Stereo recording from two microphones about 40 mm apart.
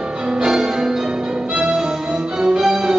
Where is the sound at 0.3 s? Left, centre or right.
Centre.